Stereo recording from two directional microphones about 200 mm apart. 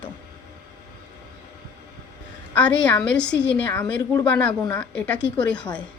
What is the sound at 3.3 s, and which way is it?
Speech, 60° left (ahead or behind).